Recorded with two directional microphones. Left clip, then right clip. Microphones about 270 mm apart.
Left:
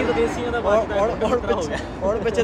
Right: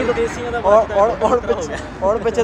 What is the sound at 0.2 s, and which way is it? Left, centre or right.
Speech, centre.